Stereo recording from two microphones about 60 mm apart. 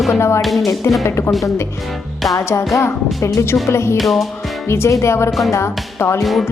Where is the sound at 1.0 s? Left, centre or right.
Left.